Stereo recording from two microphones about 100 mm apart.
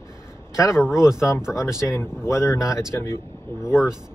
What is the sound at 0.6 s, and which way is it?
Speech, 30° left (ahead or behind).